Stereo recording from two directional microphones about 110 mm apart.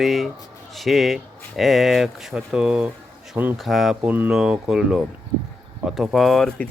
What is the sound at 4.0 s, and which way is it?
Speech, 15° right (ahead or behind).